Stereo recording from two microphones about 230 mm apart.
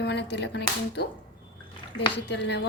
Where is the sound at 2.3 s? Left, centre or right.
Left.